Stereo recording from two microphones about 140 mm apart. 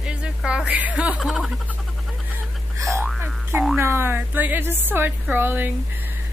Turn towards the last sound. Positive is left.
turn(degrees=-15)  # may be behind; listen again after turning